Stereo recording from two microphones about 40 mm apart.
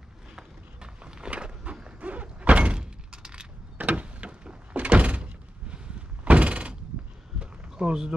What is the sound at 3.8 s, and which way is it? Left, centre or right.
Door, right.